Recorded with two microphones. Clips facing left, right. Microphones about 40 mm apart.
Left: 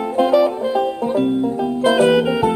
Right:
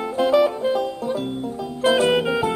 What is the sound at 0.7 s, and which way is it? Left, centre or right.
Banjo, left.